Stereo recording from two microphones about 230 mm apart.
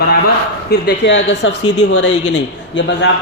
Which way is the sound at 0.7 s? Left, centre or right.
Left.